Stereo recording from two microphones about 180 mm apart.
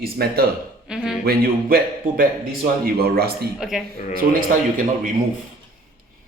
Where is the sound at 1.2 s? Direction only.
55° right (ahead or behind).